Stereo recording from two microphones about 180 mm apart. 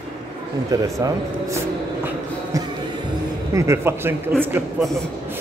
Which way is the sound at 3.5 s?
15° right (ahead or behind).